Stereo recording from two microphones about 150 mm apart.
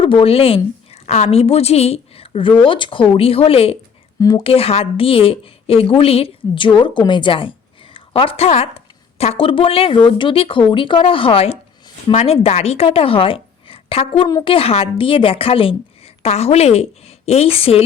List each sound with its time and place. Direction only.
0.0 s a woman's voice: 35° left (ahead or behind)
4.2 s speech: 25° left (ahead or behind)
4.4 s a woman's voice: 40° left (ahead or behind)